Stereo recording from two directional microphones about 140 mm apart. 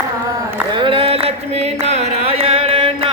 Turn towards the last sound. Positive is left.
turn(degrees=-40)  # may be behind; listen again after turning